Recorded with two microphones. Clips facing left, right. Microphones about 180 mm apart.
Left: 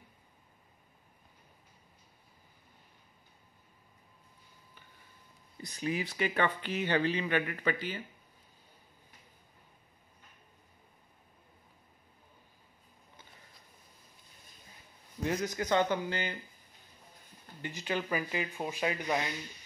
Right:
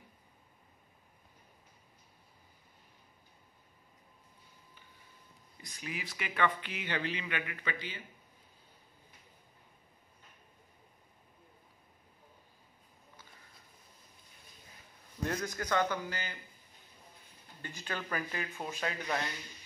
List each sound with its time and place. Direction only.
5.6 s speech: 35° left (ahead or behind)
15.4 s speech: 20° left (ahead or behind)
17.6 s speech: 20° left (ahead or behind)